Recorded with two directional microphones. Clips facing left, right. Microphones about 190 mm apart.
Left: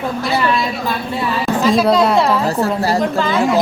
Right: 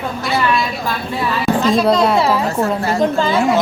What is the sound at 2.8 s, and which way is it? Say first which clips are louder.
Speech: even; 35° left (ahead or behind).